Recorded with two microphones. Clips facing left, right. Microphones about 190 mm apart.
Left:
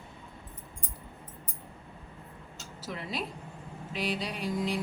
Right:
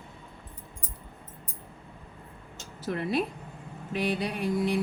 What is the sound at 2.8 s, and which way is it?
A woman's voice, 60° right (ahead or behind).